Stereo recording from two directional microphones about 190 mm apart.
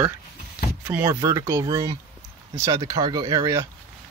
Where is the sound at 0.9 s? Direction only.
15° right (ahead or behind).